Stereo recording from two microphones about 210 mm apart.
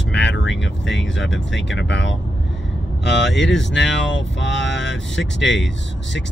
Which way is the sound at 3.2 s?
60° left (ahead or behind).